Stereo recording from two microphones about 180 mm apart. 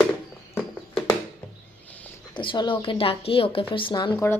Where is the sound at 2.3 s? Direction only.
25° left (ahead or behind).